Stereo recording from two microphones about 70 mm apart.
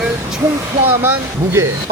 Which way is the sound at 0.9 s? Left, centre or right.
Right.